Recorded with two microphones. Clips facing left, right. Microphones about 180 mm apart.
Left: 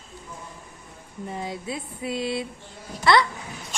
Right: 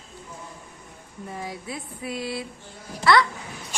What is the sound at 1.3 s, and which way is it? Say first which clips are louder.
Speech: left 3 dB; 25° left (ahead or behind).